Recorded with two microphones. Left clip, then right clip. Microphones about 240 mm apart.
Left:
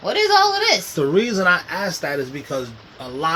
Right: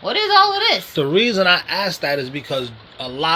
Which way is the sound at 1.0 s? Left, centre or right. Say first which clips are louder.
Right 2 dB; right.